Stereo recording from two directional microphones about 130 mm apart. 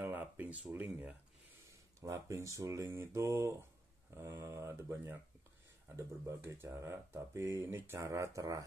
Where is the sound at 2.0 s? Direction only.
25° right (ahead or behind).